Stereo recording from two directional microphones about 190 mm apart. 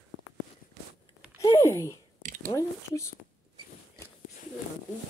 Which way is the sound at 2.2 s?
40° right (ahead or behind).